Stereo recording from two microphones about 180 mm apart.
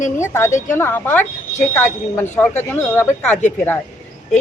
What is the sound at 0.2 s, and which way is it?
A man's voice, 15° left (ahead or behind).